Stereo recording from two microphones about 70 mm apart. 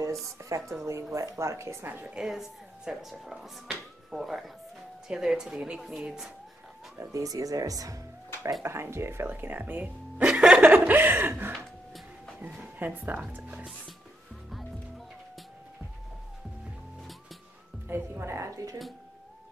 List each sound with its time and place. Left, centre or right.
0.4 s a woman's voice: right
2.0 s speech: centre
7.0 s a woman's voice: right
7.2 s speech: right
8.6 s speech: right
11.5 s music: centre
12.7 s speech: right
17.8 s music: right